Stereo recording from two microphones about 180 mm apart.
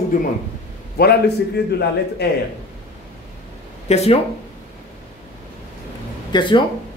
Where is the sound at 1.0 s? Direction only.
65° left (ahead or behind).